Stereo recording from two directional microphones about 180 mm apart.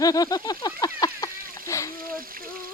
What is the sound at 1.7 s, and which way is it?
Splash, 15° left (ahead or behind).